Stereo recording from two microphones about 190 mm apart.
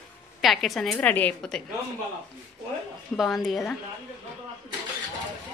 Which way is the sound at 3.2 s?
Centre (ahead or behind).